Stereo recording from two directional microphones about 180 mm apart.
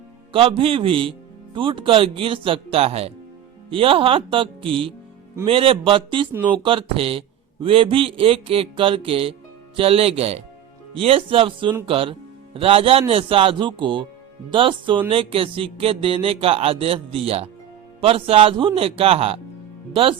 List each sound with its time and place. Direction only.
0.3 s a man's voice: 30° right (ahead or behind)